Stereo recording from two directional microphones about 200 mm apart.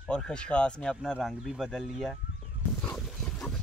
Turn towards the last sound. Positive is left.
turn(degrees=0)  # may be behind; listen again after turning